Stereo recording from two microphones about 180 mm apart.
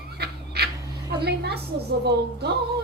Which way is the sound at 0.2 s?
65° right (ahead or behind).